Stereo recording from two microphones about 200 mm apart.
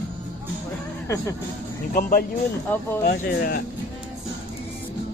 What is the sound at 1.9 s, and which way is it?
Speech, 45° left (ahead or behind).